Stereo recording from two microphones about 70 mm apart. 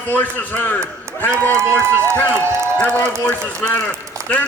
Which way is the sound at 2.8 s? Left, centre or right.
Left.